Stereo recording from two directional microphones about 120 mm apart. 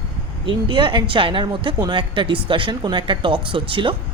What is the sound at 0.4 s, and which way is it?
A woman's voice, 40° right (ahead or behind).